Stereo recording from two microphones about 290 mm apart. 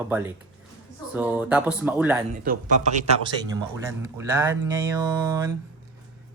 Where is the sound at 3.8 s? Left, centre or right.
Centre.